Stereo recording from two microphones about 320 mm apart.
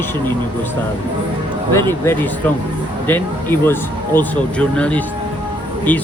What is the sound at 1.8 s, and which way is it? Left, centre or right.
Speech, centre.